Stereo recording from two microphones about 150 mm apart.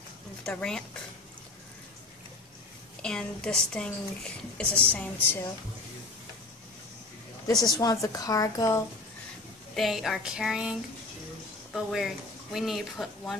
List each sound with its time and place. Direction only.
0.5 s speech: 5° left (ahead or behind)
3.0 s a woman's voice: 5° left (ahead or behind)
7.7 s a woman's voice: 25° left (ahead or behind)
9.8 s speech: centre (ahead or behind)